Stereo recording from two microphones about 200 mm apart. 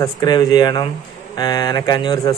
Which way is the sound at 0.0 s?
20° left (ahead or behind).